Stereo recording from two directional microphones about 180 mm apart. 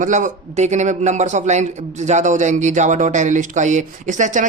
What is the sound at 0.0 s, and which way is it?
A man's voice, 45° right (ahead or behind).